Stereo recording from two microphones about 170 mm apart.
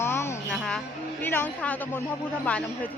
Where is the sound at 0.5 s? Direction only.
Centre (ahead or behind).